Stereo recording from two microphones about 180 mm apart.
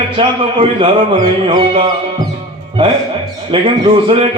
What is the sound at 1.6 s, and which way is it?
Speech, 30° right (ahead or behind).